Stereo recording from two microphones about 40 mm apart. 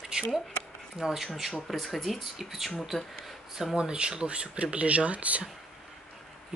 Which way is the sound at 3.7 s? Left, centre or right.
Right.